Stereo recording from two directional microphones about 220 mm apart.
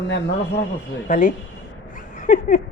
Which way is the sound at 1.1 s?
35° left (ahead or behind).